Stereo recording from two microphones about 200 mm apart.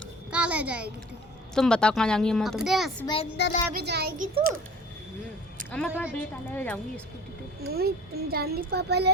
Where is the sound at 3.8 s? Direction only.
55° right (ahead or behind).